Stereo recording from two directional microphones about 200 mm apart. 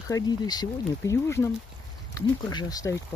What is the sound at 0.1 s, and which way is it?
Speech, 20° left (ahead or behind).